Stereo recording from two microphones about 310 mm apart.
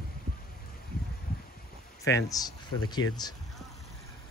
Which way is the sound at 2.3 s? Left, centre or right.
Centre.